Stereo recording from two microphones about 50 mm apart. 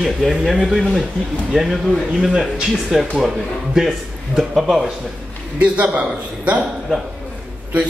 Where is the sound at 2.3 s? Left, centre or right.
Centre.